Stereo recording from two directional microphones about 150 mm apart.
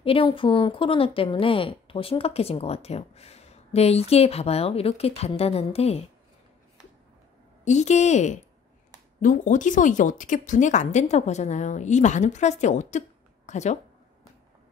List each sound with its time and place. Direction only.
0.0 s a woman's voice: 35° left (ahead or behind)
7.6 s a woman's voice: 50° left (ahead or behind)